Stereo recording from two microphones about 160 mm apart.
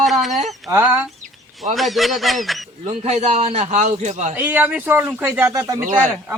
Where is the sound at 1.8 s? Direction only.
Centre (ahead or behind).